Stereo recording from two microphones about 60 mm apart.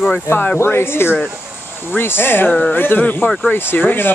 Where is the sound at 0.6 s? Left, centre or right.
Left.